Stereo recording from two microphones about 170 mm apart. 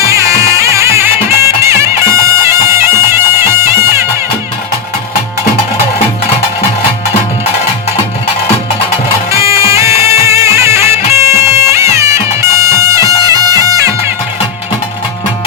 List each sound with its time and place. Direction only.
0.0 s music: 20° right (ahead or behind)
9.3 s music: 15° right (ahead or behind)